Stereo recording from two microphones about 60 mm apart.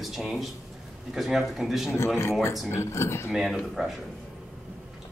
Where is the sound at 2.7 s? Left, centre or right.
Left.